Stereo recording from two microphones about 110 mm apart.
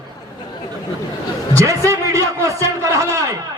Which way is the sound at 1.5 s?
25° right (ahead or behind).